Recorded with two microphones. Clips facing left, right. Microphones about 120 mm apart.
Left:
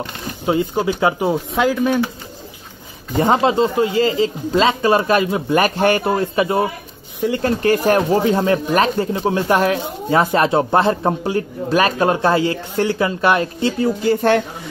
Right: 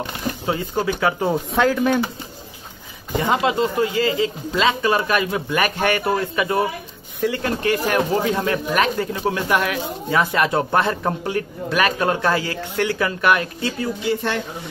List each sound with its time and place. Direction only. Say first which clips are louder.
0.5 s speech: left 5 dB; 25° left (ahead or behind)
1.3 s speech: left 1 dB; 5° left (ahead or behind)
3.2 s speech: left 4 dB; 35° left (ahead or behind)
7.4 s speech: left 9 dB; 40° left (ahead or behind)
14.0 s speech: left 8 dB; 50° left (ahead or behind)